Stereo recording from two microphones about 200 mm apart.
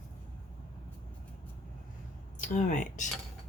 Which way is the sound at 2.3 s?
40° left (ahead or behind).